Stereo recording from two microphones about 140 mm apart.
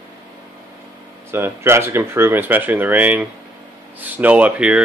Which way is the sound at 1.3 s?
20° right (ahead or behind).